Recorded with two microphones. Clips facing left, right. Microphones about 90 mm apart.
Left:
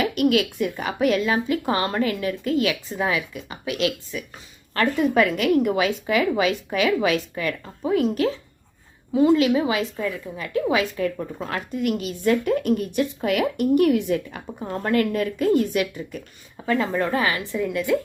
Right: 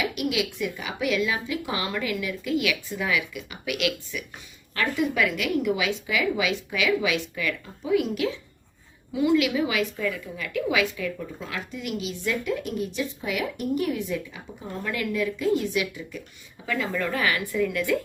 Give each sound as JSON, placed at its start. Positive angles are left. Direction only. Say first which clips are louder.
{"t": 0.0, "sound": "a woman's voice", "louder": "left 7 dB", "side_deg": 50}
{"t": 4.7, "sound": "a woman's voice", "louder": "left 5 dB", "side_deg": 45}